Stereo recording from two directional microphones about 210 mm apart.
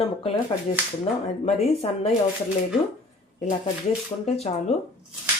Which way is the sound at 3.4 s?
30° left (ahead or behind).